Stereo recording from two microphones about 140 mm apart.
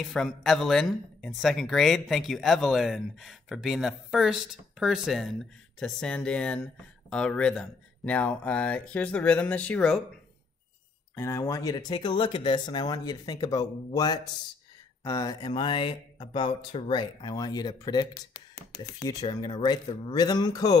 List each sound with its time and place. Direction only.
0.0 s speech: centre (ahead or behind)
11.1 s speech: 20° left (ahead or behind)